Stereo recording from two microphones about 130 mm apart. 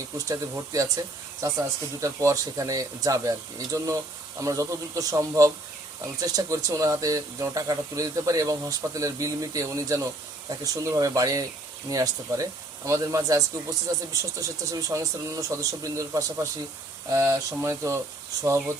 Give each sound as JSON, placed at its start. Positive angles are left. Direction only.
{"t": 0.2, "sound": "speech", "side_deg": -25}